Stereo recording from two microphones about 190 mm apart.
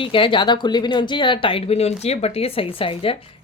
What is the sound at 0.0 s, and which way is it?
Speech, 25° left (ahead or behind).